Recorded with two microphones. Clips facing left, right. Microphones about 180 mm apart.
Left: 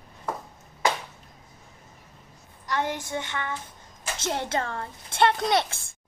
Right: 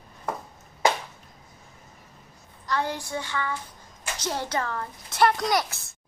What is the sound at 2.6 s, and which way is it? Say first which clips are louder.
Child singing: even; 20° left (ahead or behind).